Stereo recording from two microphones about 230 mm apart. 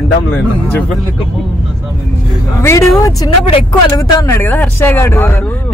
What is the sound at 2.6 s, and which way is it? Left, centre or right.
Speech, centre.